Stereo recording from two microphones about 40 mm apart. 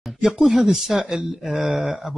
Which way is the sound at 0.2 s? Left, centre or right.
Centre.